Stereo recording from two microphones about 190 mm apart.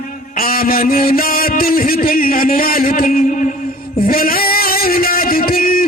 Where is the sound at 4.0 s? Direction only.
50° left (ahead or behind).